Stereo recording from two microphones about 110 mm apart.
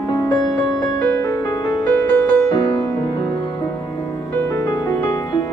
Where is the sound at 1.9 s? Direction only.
10° left (ahead or behind).